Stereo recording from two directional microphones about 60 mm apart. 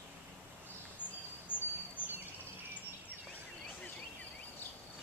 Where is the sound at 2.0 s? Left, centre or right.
Left.